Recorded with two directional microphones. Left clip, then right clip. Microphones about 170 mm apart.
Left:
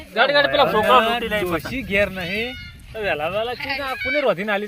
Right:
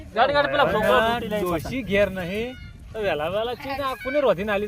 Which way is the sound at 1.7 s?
35° right (ahead or behind).